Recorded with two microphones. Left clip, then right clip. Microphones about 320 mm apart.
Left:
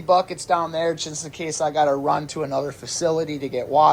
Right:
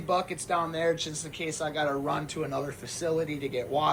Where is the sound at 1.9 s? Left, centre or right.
Centre.